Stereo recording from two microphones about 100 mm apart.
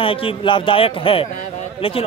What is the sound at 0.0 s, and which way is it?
Speech, 65° left (ahead or behind).